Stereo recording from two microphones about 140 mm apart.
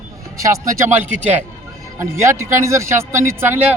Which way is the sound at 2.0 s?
20° right (ahead or behind).